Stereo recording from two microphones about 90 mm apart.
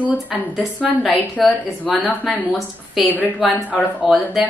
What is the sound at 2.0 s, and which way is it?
Speech, 20° left (ahead or behind).